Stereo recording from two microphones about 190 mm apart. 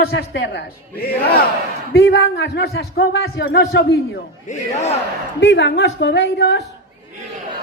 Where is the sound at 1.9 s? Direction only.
70° left (ahead or behind).